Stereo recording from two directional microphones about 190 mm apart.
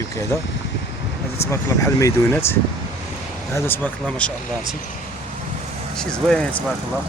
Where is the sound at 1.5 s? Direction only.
15° left (ahead or behind).